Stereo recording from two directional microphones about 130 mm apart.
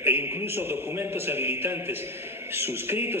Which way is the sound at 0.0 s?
20° right (ahead or behind).